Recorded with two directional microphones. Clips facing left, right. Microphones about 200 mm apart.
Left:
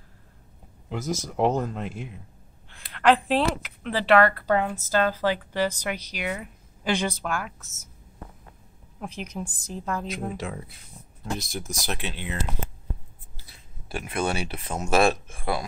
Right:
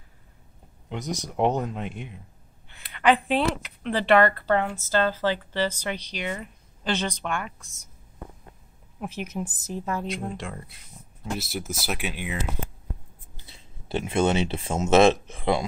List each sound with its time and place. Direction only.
0.8 s a woman's voice: centre (ahead or behind)
9.0 s speech: 5° right (ahead or behind)
13.4 s speech: 25° right (ahead or behind)